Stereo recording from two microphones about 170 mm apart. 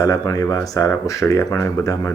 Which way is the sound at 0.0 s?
20° left (ahead or behind).